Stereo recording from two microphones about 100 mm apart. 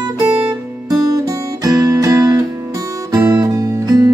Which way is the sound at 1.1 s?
35° right (ahead or behind).